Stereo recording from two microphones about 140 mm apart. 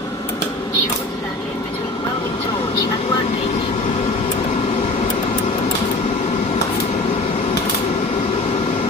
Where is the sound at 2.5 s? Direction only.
40° left (ahead or behind).